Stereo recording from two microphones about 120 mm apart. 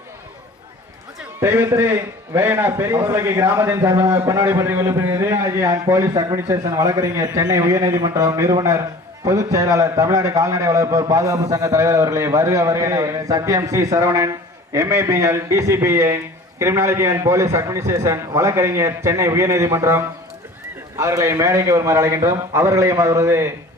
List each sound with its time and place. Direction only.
1.4 s a man's voice: 20° right (ahead or behind)
21.0 s a man's voice: 25° right (ahead or behind)